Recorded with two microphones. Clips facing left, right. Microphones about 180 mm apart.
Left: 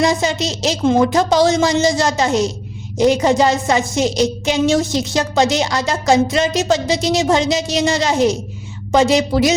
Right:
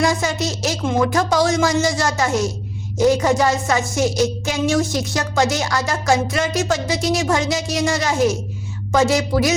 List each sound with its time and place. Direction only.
0.0 s music: 20° left (ahead or behind)